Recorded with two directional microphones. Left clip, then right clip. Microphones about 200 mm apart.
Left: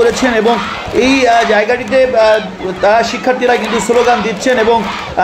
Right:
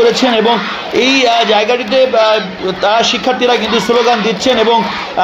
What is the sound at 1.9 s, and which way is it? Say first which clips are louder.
A man's voice: left 1 dB; 20° right (ahead or behind).